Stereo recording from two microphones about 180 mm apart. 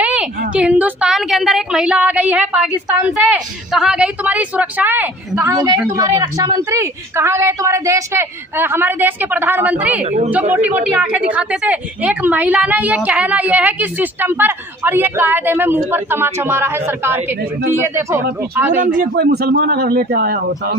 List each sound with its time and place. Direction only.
0.0 s a sound: 5° right (ahead or behind)
3.1 s a woman's voice: centre (ahead or behind)
10.0 s speech: 35° right (ahead or behind)
10.5 s a woman's voice: 10° right (ahead or behind)
18.8 s speech: 55° right (ahead or behind)